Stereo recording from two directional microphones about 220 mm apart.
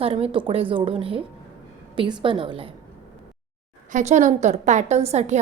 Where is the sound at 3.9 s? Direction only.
30° right (ahead or behind).